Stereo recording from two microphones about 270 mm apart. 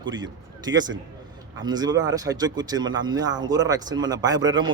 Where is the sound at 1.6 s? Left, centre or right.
Centre.